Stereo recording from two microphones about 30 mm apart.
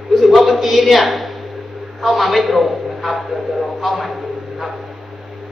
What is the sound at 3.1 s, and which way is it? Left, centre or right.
Speech, right.